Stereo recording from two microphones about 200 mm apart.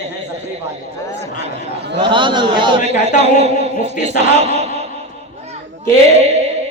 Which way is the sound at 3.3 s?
35° right (ahead or behind).